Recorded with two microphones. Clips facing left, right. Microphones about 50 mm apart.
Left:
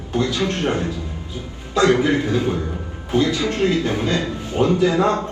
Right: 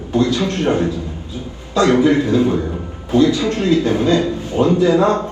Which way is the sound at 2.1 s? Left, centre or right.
Right.